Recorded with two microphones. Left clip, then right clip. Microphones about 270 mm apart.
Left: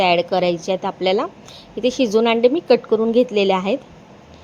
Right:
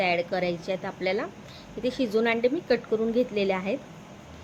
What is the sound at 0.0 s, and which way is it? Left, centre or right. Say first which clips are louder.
A woman's voice: left 9 dB; left.